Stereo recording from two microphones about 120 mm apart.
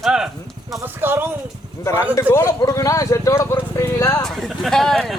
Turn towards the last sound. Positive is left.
turn(degrees=0)  # may be behind; listen again after turning